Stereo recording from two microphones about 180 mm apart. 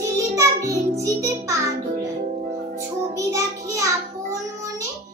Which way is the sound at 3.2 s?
15° right (ahead or behind).